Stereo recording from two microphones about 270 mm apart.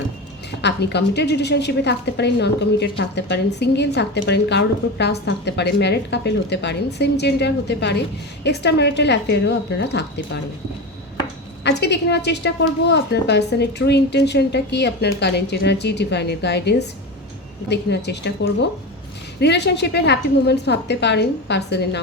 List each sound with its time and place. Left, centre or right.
0.6 s a woman's voice: left
11.6 s a woman's voice: left
19.4 s a woman's voice: left